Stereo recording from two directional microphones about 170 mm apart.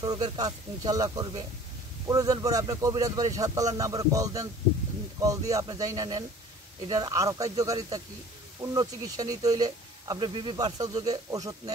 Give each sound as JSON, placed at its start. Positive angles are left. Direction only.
{"t": 0.0, "sound": "speech", "side_deg": -25}